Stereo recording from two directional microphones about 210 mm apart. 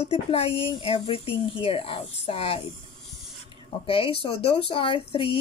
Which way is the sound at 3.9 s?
25° left (ahead or behind).